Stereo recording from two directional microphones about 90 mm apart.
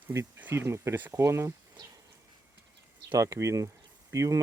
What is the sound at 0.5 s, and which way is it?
Speech, 30° right (ahead or behind).